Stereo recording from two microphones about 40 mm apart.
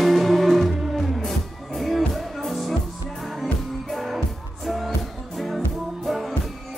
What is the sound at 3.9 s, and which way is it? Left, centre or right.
Music, centre.